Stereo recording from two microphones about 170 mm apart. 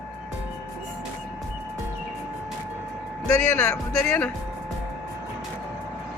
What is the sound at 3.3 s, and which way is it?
Speech, 10° left (ahead or behind).